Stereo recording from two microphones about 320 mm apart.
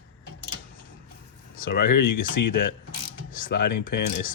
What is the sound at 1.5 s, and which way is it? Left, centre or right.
A man's voice, left.